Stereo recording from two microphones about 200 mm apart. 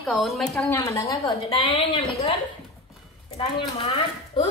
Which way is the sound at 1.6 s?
25° left (ahead or behind).